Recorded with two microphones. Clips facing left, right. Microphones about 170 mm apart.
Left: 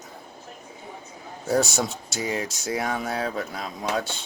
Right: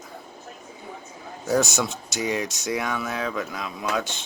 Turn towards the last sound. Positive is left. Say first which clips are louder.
# even
turn(degrees=35)  # may be behind; listen again after turning